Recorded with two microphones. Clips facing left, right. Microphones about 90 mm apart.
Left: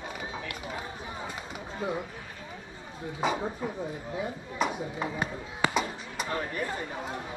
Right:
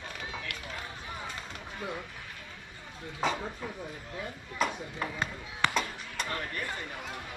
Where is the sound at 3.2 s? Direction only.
15° left (ahead or behind).